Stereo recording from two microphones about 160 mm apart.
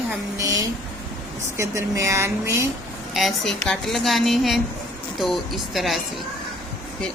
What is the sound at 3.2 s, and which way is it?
A woman's voice, centre (ahead or behind).